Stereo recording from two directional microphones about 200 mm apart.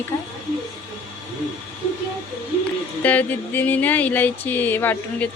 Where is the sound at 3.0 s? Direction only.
10° left (ahead or behind).